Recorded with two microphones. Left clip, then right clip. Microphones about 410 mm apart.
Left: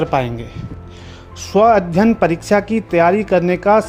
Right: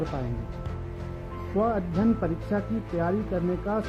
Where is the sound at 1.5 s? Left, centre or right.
Left.